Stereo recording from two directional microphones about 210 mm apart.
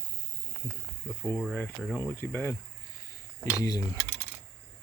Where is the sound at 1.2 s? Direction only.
10° left (ahead or behind).